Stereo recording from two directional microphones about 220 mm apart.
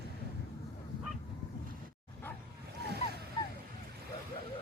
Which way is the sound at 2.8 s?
45° right (ahead or behind).